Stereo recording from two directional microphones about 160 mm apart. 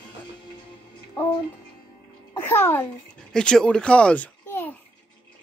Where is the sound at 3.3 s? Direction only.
5° left (ahead or behind).